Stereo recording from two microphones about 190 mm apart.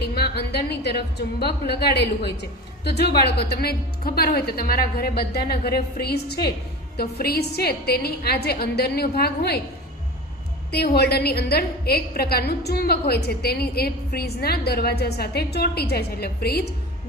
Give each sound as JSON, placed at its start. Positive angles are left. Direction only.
{"t": 0.0, "sound": "a woman's voice", "side_deg": 55}
{"t": 10.7, "sound": "a woman's voice", "side_deg": 55}